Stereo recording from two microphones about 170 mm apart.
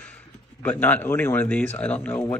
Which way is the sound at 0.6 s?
10° left (ahead or behind).